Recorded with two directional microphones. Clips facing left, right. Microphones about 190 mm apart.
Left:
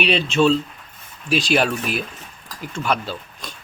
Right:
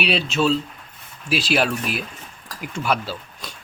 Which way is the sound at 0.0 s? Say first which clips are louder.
Left 3 dB; 5° right (ahead or behind).